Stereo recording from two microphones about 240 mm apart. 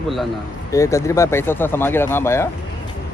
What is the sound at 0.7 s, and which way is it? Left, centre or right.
A man's voice, centre.